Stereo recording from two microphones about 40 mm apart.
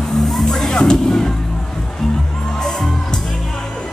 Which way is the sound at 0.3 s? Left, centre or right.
Centre.